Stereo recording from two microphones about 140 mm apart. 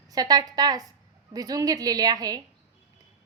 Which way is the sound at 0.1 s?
30° right (ahead or behind).